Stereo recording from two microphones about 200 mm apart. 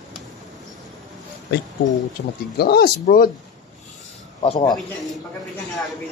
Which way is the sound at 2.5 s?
50° left (ahead or behind).